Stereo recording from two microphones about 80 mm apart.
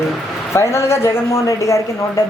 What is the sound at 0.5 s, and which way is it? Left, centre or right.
Speech, left.